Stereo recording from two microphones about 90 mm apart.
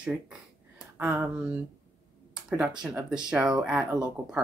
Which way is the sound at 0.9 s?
20° right (ahead or behind).